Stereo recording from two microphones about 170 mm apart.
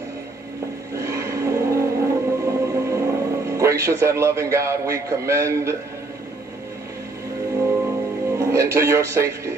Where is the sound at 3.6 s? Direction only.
15° right (ahead or behind).